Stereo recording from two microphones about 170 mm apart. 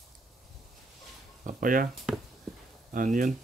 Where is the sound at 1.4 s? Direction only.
50° right (ahead or behind).